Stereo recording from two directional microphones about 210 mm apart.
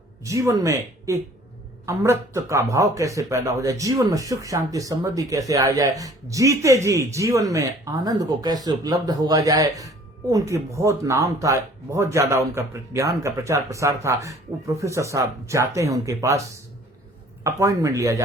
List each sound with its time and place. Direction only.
0.3 s speech: 15° right (ahead or behind)